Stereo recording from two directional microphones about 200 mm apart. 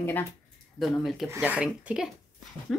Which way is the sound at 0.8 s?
Centre (ahead or behind).